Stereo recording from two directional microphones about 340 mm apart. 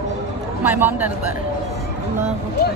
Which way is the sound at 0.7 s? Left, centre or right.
Centre.